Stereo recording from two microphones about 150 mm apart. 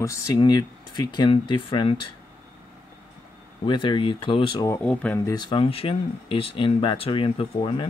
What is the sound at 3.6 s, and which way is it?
Speech, 35° left (ahead or behind).